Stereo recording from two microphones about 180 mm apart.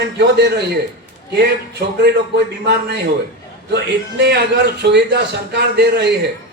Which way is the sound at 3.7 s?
65° right (ahead or behind).